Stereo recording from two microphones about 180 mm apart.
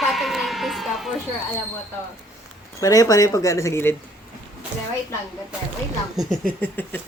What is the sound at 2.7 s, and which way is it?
Speech, 20° left (ahead or behind).